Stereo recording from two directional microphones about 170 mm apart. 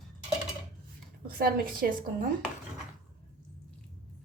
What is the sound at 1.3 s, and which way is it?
Speech, 60° right (ahead or behind).